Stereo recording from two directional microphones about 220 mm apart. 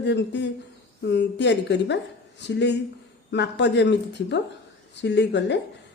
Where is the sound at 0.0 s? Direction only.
50° left (ahead or behind).